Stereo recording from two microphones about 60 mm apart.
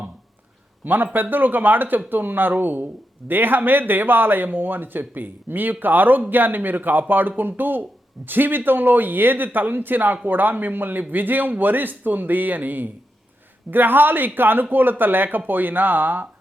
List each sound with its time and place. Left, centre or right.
0.9 s speech: right